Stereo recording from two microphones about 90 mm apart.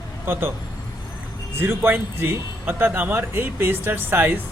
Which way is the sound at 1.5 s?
25° right (ahead or behind).